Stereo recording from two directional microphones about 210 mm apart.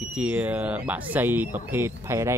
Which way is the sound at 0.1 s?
5° right (ahead or behind).